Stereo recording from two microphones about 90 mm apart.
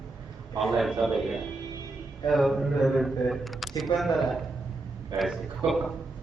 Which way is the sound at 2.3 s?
Centre (ahead or behind).